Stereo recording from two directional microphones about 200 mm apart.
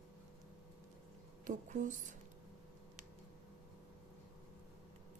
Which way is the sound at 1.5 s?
40° right (ahead or behind).